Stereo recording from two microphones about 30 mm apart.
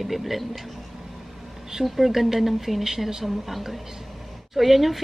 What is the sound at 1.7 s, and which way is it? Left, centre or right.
A woman's voice, centre.